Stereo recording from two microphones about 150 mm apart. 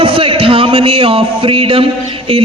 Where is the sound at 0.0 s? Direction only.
35° right (ahead or behind).